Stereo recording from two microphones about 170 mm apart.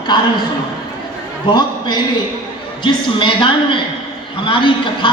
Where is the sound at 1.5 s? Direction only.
25° left (ahead or behind).